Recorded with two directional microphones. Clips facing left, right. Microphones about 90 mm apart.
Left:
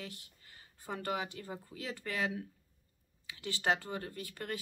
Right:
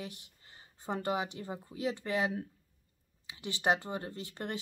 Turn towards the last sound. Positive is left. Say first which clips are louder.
# right 2 dB
turn(degrees=-25)  # may be behind; listen again after turning